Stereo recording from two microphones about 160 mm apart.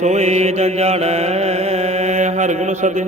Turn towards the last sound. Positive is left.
turn(degrees=-50)  # may be behind; listen again after turning